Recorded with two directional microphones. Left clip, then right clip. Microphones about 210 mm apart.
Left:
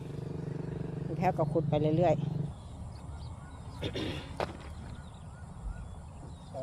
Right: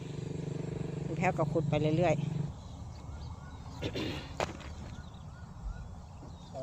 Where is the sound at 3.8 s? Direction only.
10° right (ahead or behind).